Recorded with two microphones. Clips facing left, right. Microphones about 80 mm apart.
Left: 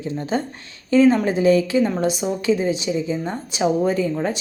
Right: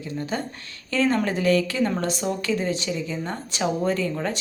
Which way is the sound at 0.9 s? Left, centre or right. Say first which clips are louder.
Left 7 dB; centre.